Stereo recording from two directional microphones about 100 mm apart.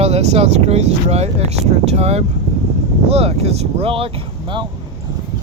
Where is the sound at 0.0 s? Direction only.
90° right; by 4.6 s 60° right (ahead or behind).